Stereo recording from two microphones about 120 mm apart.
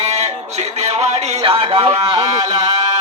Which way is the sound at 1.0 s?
50° right (ahead or behind).